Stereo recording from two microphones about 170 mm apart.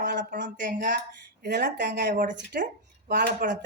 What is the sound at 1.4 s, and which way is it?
Speech, 75° right (ahead or behind).